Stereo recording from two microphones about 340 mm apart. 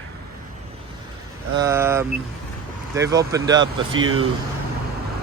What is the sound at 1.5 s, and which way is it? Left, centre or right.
Speech, centre.